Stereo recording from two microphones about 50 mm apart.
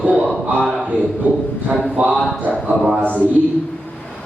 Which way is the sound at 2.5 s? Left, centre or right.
Left.